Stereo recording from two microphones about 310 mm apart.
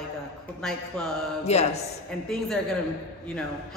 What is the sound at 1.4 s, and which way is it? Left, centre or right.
Speech, left.